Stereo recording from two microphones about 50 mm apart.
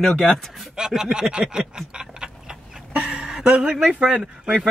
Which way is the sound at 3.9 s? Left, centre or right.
Centre.